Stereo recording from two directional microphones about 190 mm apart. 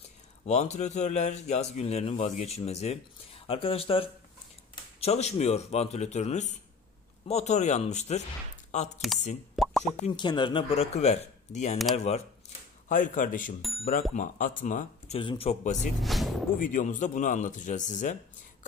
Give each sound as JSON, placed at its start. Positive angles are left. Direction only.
{"t": 0.5, "sound": "speech", "side_deg": 35}
{"t": 9.6, "sound": "plop", "side_deg": 0}
{"t": 10.0, "sound": "speech", "side_deg": 25}
{"t": 12.8, "sound": "a man's voice", "side_deg": 40}
{"t": 13.6, "sound": "speech", "side_deg": 0}
{"t": 14.1, "sound": "speech", "side_deg": 45}
{"t": 16.0, "sound": "music", "side_deg": 0}
{"t": 16.5, "sound": "speech", "side_deg": 45}